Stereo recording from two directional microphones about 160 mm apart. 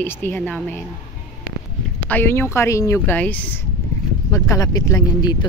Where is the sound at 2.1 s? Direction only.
15° left (ahead or behind).